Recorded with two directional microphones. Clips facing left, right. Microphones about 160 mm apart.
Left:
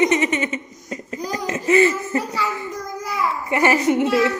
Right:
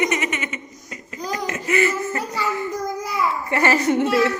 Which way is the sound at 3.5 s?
15° left (ahead or behind).